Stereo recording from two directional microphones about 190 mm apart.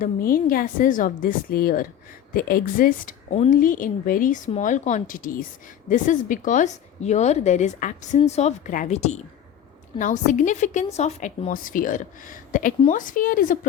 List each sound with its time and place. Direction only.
0.0 s a woman's voice: 50° left (ahead or behind)